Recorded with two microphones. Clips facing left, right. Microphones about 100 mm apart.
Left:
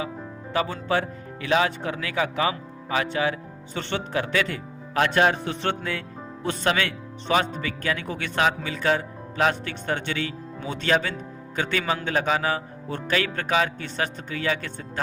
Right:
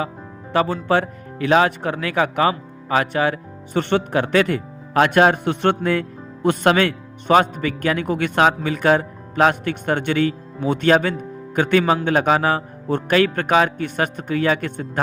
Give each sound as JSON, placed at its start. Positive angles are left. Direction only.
{"t": 0.5, "sound": "a man's voice", "side_deg": -45}